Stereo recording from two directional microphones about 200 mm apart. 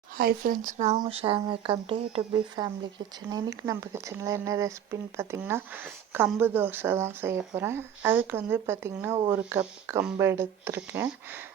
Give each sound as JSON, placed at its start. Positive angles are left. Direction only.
{"t": 0.2, "sound": "speech", "side_deg": -45}